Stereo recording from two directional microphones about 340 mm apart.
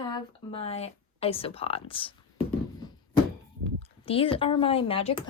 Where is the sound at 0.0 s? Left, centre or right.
Centre.